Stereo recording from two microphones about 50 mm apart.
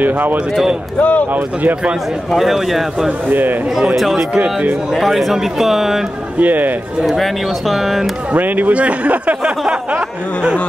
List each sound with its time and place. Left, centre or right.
0.0 s a man's voice: right
0.9 s speech: left
1.3 s a man's voice: right
2.3 s speech: centre
3.3 s a man's voice: right
3.9 s speech: centre
6.4 s a man's voice: right
7.1 s speech: centre
8.3 s a man's voice: right